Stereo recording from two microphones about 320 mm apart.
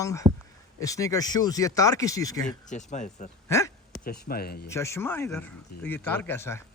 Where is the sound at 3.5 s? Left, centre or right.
Centre.